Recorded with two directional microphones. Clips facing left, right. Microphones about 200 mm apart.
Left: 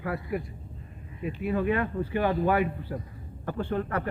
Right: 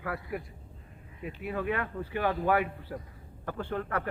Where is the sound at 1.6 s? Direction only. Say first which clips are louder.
Left 5 dB; 25° left (ahead or behind).